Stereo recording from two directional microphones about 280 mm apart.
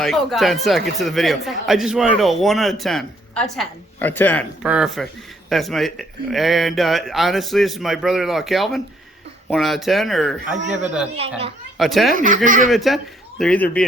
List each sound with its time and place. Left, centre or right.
0.0 s speech: centre
11.2 s a child's voice: right
11.8 s speech: centre
12.1 s a child's voice: right
12.7 s speech: centre